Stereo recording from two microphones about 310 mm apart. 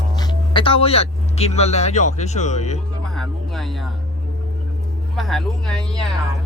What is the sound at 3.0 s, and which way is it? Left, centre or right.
Music, centre.